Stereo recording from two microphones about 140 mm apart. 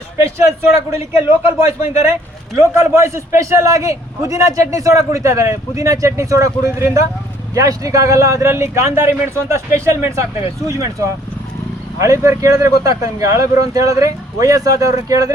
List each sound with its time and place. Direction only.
0.8 s a man's voice: 20° right (ahead or behind)